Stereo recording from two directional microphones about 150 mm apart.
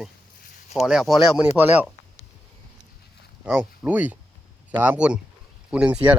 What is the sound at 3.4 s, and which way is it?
Speech, 10° right (ahead or behind).